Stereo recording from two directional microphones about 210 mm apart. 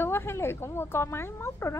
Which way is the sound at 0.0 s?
10° left (ahead or behind).